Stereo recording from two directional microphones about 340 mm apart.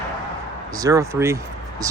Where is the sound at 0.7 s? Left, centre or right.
Centre.